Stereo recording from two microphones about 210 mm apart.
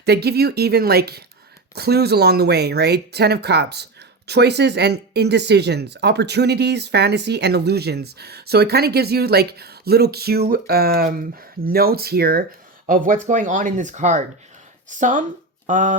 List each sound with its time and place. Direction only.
0.0 s speech: 50° right (ahead or behind)